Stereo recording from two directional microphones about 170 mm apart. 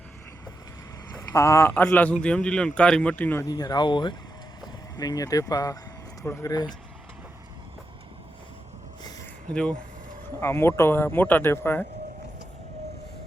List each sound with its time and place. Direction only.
1.1 s a man's voice: 20° left (ahead or behind)
9.5 s speech: 5° left (ahead or behind)